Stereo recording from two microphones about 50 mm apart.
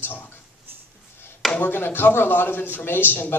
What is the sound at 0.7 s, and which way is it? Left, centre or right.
Music, right.